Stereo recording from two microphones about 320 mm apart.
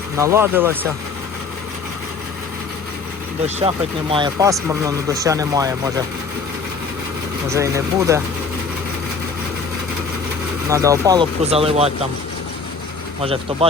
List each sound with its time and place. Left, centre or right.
0.2 s speech: centre
3.4 s speech: centre
7.5 s speech: centre
10.7 s speech: centre
13.2 s speech: centre